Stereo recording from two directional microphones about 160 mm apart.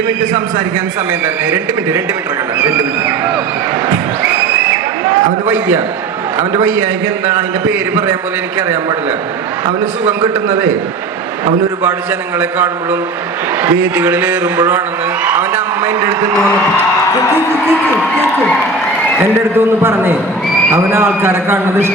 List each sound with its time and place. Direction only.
1.5 s a man's voice: 15° right (ahead or behind)
5.5 s a man's voice: 10° right (ahead or behind)
10.1 s a man's voice: 20° right (ahead or behind)
12.4 s a man's voice: 15° right (ahead or behind)
15.2 s a sound: 10° right (ahead or behind)
19.2 s a man's voice: 15° right (ahead or behind)